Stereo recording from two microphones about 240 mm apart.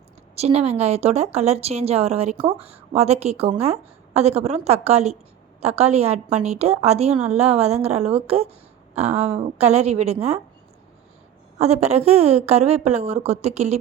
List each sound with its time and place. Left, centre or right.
0.3 s speech: right
11.5 s speech: right